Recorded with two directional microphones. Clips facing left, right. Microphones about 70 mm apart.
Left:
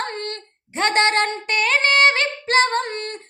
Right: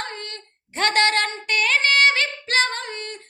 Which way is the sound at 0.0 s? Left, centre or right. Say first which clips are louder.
Left 5 dB; left.